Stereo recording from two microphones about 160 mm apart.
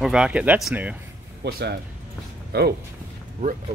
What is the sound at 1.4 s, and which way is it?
Speech, 90° right.